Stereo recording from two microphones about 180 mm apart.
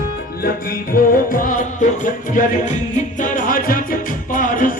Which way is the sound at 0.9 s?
50° left (ahead or behind).